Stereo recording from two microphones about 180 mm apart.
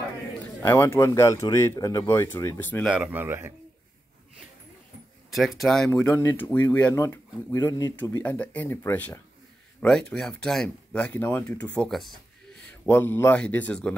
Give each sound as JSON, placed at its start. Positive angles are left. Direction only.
{"t": 0.6, "sound": "speech", "side_deg": 15}
{"t": 2.8, "sound": "speech", "side_deg": -5}
{"t": 5.3, "sound": "speech", "side_deg": 0}
{"t": 5.9, "sound": "speech", "side_deg": 15}